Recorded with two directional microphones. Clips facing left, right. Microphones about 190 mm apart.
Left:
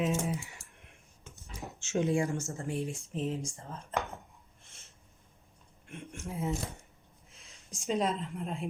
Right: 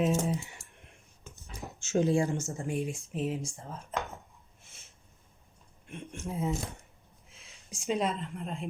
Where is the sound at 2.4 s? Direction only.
15° right (ahead or behind).